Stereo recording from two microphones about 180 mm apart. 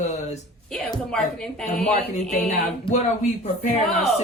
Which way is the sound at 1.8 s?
40° left (ahead or behind).